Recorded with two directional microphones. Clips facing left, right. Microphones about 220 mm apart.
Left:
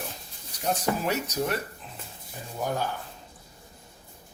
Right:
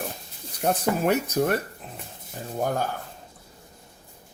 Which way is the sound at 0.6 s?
55° right (ahead or behind).